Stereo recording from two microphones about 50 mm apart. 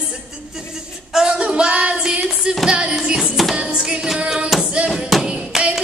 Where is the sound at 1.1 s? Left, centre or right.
Centre.